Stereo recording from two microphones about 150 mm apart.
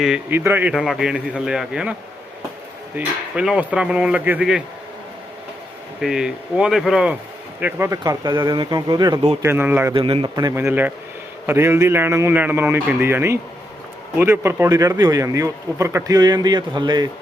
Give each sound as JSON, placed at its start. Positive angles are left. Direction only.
{"t": 0.3, "sound": "a man's voice", "side_deg": -15}
{"t": 6.0, "sound": "a man's voice", "side_deg": -5}
{"t": 7.6, "sound": "a man's voice", "side_deg": -20}
{"t": 9.4, "sound": "a man's voice", "side_deg": -15}
{"t": 9.9, "sound": "a man's voice", "side_deg": -40}
{"t": 10.3, "sound": "a man's voice", "side_deg": -20}